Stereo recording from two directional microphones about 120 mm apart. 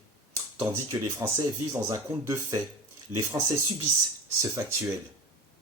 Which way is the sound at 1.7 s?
20° right (ahead or behind).